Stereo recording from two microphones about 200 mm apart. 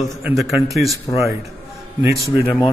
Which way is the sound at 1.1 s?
15° left (ahead or behind).